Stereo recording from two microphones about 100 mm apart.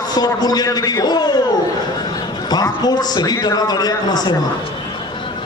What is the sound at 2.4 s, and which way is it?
A man's voice, 40° left (ahead or behind).